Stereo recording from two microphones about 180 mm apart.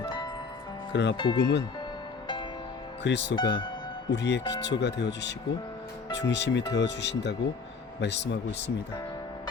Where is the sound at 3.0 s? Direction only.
75° left (ahead or behind).